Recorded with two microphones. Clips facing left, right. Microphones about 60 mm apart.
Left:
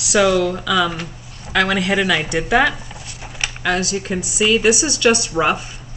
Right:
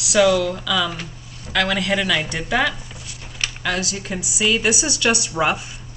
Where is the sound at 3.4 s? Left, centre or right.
Centre.